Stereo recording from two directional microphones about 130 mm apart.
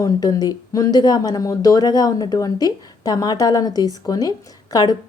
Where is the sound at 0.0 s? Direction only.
30° left (ahead or behind).